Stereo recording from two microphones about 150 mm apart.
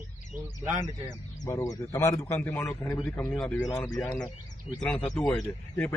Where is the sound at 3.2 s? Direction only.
5° left (ahead or behind).